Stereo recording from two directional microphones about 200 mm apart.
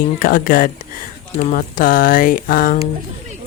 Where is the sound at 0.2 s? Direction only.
45° left (ahead or behind).